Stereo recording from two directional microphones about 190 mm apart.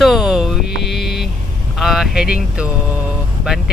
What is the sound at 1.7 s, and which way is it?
Speech, centre (ahead or behind).